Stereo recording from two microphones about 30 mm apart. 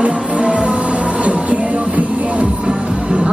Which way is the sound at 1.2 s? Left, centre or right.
Right.